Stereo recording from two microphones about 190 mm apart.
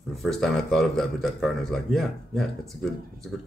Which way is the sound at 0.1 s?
Centre (ahead or behind).